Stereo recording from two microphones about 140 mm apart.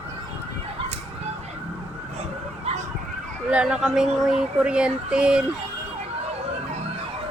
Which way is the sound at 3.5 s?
5° right (ahead or behind).